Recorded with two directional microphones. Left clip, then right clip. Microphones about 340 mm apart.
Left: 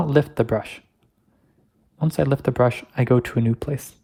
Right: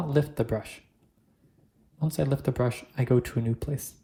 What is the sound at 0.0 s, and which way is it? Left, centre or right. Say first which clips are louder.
Speech: left 8 dB; centre.